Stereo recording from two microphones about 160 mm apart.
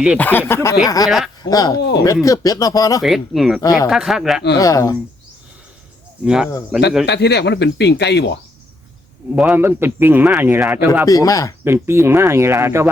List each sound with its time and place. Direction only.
0.2 s speech: 10° left (ahead or behind)
1.8 s speech: 90° left
2.2 s speech: 20° left (ahead or behind)
3.0 s speech: centre (ahead or behind)
3.6 s speech: 20° left (ahead or behind)
3.8 s speech: centre (ahead or behind)
4.5 s speech: 20° left (ahead or behind)
6.2 s speech: 5° right (ahead or behind)
7.0 s speech: 90° left
9.3 s a man's voice: 10° right (ahead or behind)
11.0 s speech: 20° left (ahead or behind)
11.6 s a man's voice: 15° right (ahead or behind)